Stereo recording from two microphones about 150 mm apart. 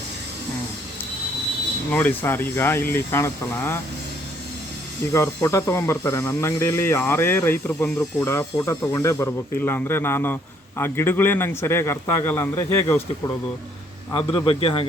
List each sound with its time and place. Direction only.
1.9 s speech: 10° left (ahead or behind)
5.1 s speech: 20° left (ahead or behind)
14.1 s a man's voice: 30° left (ahead or behind)